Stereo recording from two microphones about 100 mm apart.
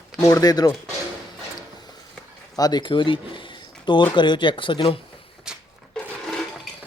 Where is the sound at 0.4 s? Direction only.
40° left (ahead or behind).